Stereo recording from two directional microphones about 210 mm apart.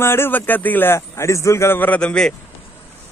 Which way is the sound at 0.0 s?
10° left (ahead or behind).